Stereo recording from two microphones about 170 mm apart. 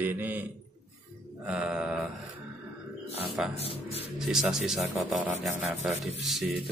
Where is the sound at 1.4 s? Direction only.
5° right (ahead or behind).